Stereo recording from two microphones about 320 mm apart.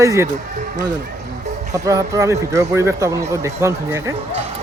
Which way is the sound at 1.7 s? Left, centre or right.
Centre.